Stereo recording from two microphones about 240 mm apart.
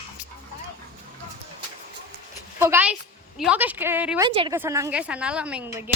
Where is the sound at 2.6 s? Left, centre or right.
Centre.